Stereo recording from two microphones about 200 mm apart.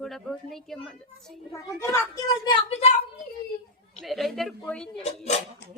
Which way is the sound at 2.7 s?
30° left (ahead or behind).